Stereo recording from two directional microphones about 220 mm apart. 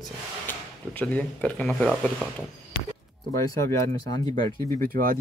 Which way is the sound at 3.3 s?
15° left (ahead or behind).